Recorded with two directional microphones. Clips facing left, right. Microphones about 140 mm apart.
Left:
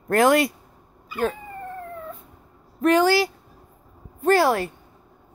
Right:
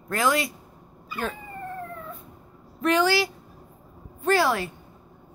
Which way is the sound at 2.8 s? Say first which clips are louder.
Left 4 dB; 45° left (ahead or behind).